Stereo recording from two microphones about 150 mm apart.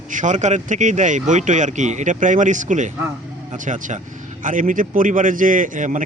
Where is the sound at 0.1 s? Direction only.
55° right (ahead or behind).